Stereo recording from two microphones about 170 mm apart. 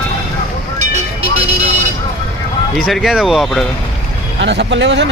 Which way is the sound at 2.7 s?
Centre (ahead or behind).